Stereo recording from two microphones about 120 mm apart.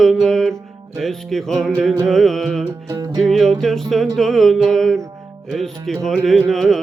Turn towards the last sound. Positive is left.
turn(degrees=5)  # may be behind; listen again after turning